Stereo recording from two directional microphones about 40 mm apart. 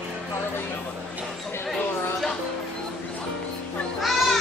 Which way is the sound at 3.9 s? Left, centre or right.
Centre.